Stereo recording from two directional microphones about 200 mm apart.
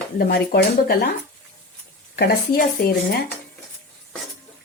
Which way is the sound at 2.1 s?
50° left (ahead or behind).